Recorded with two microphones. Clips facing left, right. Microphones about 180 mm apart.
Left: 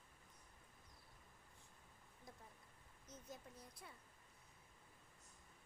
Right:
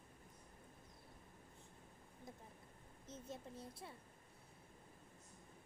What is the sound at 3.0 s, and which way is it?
Speech, 25° right (ahead or behind).